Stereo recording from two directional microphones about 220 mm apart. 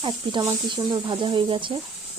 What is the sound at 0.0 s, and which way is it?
Speech, 20° right (ahead or behind).